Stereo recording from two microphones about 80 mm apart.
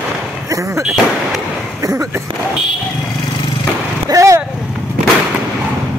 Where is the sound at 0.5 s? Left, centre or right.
Right.